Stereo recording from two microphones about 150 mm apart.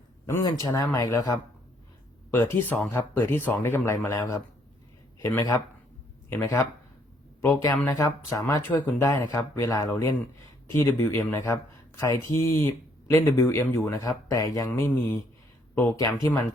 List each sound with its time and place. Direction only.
0.3 s speech: 20° left (ahead or behind)